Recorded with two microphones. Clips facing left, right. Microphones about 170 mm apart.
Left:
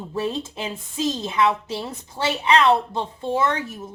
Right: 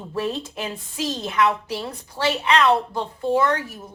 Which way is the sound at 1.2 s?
25° left (ahead or behind).